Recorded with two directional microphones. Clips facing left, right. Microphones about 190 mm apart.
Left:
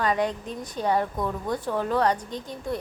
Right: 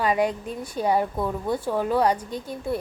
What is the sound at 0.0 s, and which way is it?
Speech, 10° right (ahead or behind).